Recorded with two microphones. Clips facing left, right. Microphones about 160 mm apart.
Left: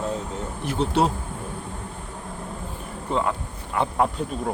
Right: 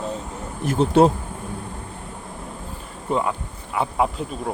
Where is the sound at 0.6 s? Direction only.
45° right (ahead or behind).